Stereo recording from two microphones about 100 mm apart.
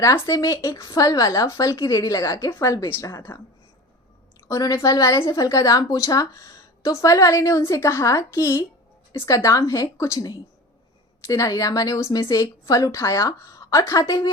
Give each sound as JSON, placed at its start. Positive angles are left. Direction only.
{"t": 0.0, "sound": "a woman's voice", "side_deg": 35}
{"t": 4.4, "sound": "a woman's voice", "side_deg": 35}